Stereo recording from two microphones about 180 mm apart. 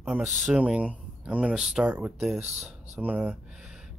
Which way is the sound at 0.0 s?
5° right (ahead or behind).